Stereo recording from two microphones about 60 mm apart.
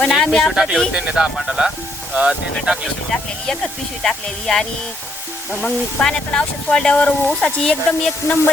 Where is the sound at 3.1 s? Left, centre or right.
Centre.